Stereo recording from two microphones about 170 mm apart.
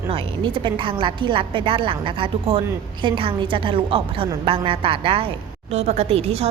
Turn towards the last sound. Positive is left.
turn(degrees=-35)  # may be behind; listen again after turning